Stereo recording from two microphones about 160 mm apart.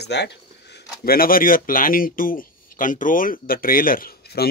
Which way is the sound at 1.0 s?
65° left (ahead or behind).